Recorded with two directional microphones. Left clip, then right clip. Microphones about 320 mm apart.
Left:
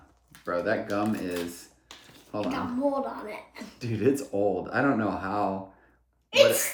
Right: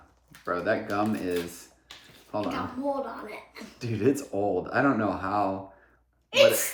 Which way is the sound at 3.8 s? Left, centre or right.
Centre.